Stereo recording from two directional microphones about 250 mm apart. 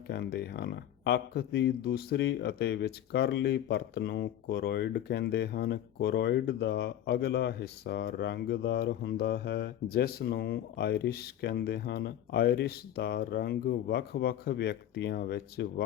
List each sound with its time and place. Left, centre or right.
0.1 s speech: left